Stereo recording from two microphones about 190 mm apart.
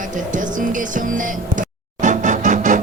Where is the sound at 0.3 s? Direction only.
45° right (ahead or behind).